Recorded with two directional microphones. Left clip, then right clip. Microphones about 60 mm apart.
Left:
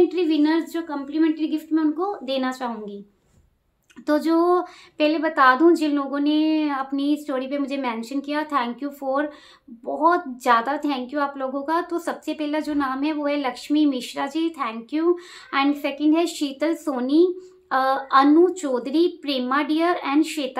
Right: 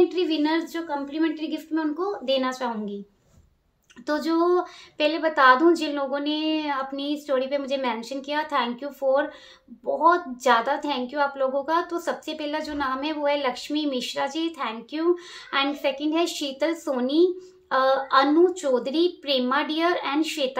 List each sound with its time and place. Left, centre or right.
0.1 s a woman's voice: left
4.0 s a woman's voice: left